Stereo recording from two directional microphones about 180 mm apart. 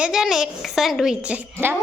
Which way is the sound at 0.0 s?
5° right (ahead or behind).